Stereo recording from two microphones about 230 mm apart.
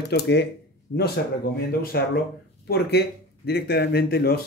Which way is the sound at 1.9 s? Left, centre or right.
Left.